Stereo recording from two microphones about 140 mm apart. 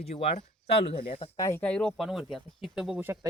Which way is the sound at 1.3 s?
20° left (ahead or behind).